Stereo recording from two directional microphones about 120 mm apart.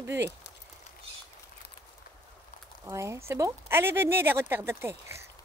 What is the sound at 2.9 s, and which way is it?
Speech, 25° right (ahead or behind).